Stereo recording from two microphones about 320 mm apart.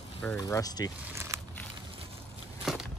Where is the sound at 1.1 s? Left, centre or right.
Centre.